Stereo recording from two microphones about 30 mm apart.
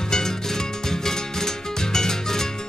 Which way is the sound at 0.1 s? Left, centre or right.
Centre.